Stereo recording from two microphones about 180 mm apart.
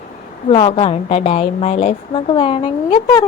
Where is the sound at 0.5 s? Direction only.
30° left (ahead or behind).